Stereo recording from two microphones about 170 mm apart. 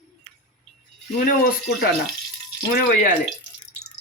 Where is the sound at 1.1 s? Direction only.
65° left (ahead or behind).